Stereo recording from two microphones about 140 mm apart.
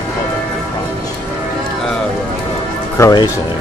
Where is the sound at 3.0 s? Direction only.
30° left (ahead or behind).